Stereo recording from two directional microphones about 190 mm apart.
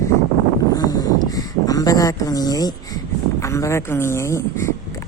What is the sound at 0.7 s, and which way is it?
Speech, 20° left (ahead or behind).